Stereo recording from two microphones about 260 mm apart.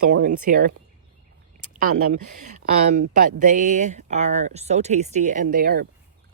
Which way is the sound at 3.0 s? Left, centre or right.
Right.